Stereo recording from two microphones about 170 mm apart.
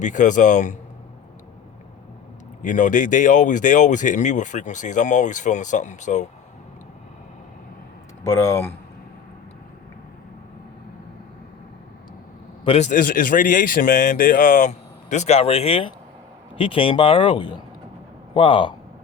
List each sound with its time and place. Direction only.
0.0 s speech: 45° left (ahead or behind)
2.6 s speech: 45° left (ahead or behind)
8.2 s speech: 15° left (ahead or behind)
12.6 s speech: 40° left (ahead or behind)